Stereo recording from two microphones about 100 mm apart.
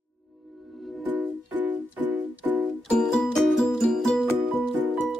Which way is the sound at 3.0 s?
5° left (ahead or behind).